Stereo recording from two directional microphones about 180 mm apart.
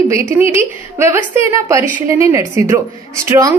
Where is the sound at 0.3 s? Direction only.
15° right (ahead or behind).